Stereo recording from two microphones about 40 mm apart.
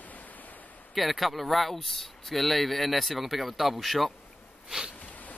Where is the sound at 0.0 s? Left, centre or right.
Left.